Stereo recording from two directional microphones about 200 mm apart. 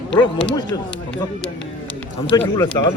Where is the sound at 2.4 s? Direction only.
10° left (ahead or behind).